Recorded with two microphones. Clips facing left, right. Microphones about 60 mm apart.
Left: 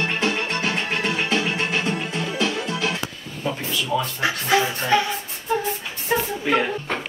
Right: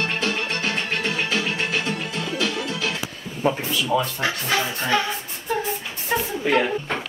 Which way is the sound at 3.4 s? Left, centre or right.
Right.